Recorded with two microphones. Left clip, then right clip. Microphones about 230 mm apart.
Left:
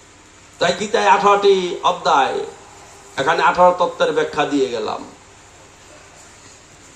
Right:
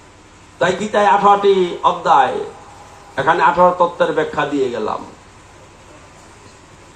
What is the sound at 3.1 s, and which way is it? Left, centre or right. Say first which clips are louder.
A man's voice: right 2 dB; left.